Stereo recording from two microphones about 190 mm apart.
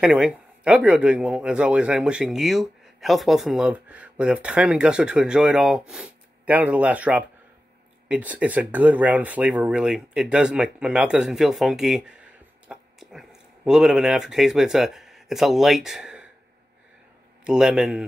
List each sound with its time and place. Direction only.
0.0 s speech: 5° right (ahead or behind)
17.5 s speech: 5° right (ahead or behind)